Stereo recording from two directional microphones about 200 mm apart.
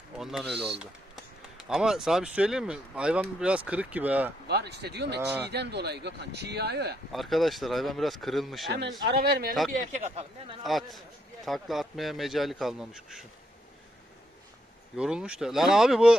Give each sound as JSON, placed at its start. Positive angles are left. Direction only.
{"t": 0.2, "sound": "speech", "side_deg": 0}
{"t": 0.4, "sound": "speech", "side_deg": -55}
{"t": 1.1, "sound": "speech", "side_deg": -5}
{"t": 4.4, "sound": "speech", "side_deg": -55}
{"t": 7.1, "sound": "a man's voice", "side_deg": 0}
{"t": 9.0, "sound": "speech", "side_deg": -50}
{"t": 9.7, "sound": "speech", "side_deg": -35}
{"t": 10.6, "sound": "a man's voice", "side_deg": 0}
{"t": 14.9, "sound": "a man's voice", "side_deg": -5}